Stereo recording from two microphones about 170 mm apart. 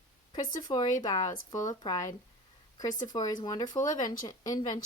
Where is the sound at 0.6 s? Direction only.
25° left (ahead or behind).